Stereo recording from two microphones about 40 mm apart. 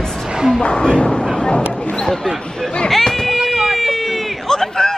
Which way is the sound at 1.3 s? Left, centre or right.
Left.